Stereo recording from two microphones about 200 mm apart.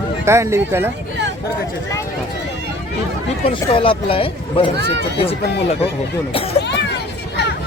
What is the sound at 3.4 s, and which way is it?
Speech, 25° left (ahead or behind).